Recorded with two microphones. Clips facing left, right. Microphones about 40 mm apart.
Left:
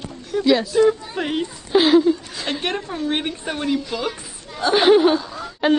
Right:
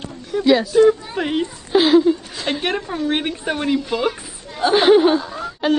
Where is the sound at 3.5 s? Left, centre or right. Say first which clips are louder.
Right 3 dB; right.